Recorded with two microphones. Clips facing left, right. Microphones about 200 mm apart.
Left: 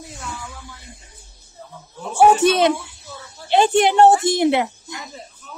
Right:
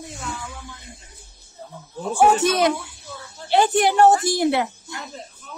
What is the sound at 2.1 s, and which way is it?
Speech, 30° left (ahead or behind).